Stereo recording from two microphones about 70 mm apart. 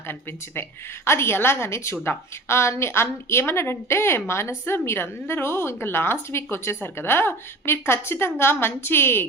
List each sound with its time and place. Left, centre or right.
1.0 s a woman's voice: left